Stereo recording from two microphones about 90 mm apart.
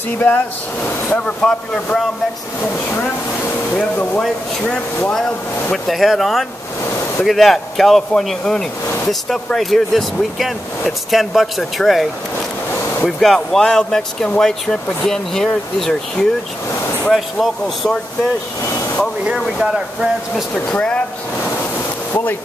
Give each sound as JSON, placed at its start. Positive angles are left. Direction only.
{"t": 0.8, "sound": "speech", "side_deg": 20}
{"t": 1.2, "sound": "speech", "side_deg": 10}
{"t": 3.7, "sound": "speech", "side_deg": 15}
{"t": 5.7, "sound": "speech", "side_deg": 0}
{"t": 19.2, "sound": "speech", "side_deg": -5}
{"t": 20.5, "sound": "speech", "side_deg": 10}
{"t": 22.1, "sound": "speech", "side_deg": 20}